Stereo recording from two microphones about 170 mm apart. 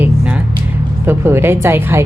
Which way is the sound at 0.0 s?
10° right (ahead or behind).